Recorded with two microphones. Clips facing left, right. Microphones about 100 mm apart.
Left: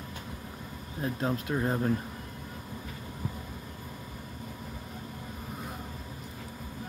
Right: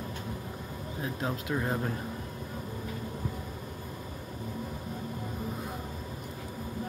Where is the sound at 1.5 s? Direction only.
10° left (ahead or behind).